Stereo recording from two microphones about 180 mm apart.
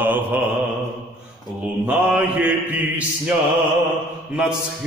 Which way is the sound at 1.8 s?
10° right (ahead or behind).